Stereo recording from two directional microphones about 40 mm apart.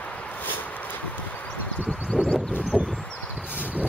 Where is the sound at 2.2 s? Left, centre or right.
Left.